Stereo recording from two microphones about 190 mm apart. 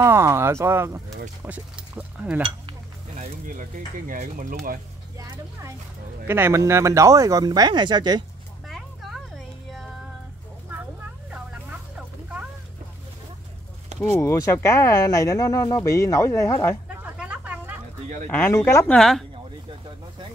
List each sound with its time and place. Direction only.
0.0 s speech: 15° right (ahead or behind)
3.2 s speech: 45° right (ahead or behind)
5.2 s speech: 15° right (ahead or behind)
8.6 s a sound: centre (ahead or behind)
14.0 s speech: 15° left (ahead or behind)
16.9 s vehicle: 10° right (ahead or behind)
18.3 s speech: 10° left (ahead or behind)